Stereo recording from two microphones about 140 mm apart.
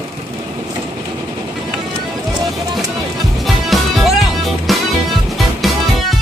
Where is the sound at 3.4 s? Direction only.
Centre (ahead or behind).